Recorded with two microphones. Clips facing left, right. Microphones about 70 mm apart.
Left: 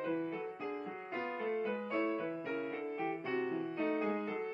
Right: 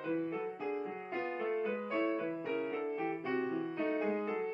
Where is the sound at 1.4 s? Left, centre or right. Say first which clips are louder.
Right 1 dB; centre.